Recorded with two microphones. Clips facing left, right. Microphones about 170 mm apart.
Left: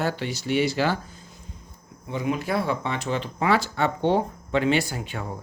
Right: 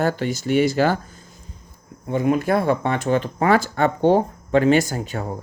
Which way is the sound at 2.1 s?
50° right (ahead or behind).